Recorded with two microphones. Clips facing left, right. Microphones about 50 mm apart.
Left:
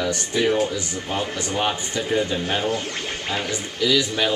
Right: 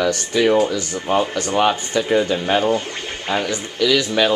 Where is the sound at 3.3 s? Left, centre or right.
Right.